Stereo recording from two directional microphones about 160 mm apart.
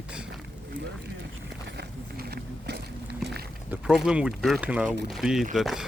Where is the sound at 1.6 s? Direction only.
80° right.